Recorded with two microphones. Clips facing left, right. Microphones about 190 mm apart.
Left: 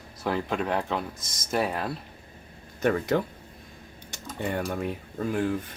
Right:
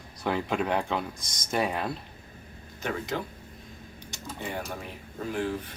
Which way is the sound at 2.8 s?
55° left (ahead or behind).